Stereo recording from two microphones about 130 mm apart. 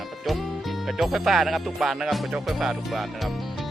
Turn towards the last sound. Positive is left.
turn(degrees=-5)  # may be behind; listen again after turning